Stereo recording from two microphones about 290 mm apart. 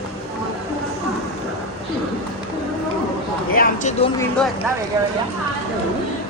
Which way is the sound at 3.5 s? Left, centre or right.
Left.